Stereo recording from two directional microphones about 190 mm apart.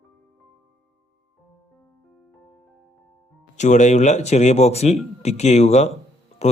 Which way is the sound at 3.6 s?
40° left (ahead or behind).